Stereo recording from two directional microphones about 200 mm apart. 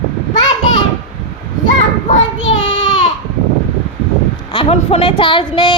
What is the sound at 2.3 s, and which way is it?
Child singing, 70° left (ahead or behind).